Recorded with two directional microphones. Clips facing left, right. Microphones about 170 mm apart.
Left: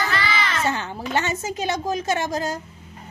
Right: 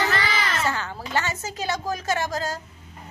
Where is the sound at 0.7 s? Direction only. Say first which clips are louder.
Left 3 dB; 20° left (ahead or behind).